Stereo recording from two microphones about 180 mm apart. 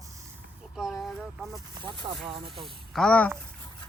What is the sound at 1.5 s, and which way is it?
Speech, 25° right (ahead or behind).